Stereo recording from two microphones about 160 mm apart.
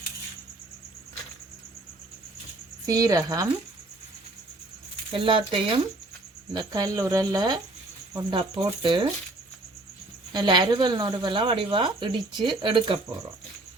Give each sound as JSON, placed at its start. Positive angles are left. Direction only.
{"t": 2.8, "sound": "a woman's voice", "side_deg": -20}
{"t": 5.1, "sound": "a woman's voice", "side_deg": -30}
{"t": 10.3, "sound": "a woman's voice", "side_deg": -25}